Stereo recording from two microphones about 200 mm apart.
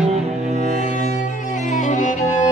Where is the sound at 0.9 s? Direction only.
40° left (ahead or behind).